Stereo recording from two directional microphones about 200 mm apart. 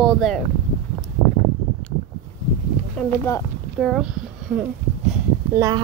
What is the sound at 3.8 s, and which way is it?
Speech, centre (ahead or behind).